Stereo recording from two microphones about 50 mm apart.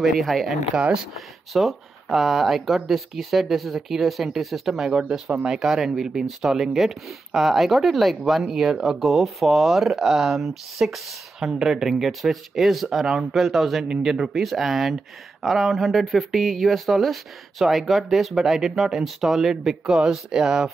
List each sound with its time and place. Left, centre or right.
0.0 s speech: centre
0.5 s speech: centre
1.1 s speech: centre
5.6 s speech: centre